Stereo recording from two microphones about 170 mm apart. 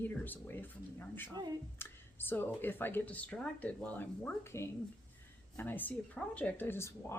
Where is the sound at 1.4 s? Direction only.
20° right (ahead or behind).